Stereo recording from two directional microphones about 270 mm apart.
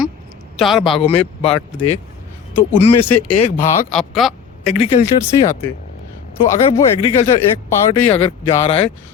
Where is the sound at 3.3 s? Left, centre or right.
Left.